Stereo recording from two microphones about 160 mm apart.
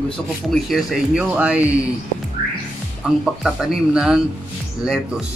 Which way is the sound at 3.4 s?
5° right (ahead or behind).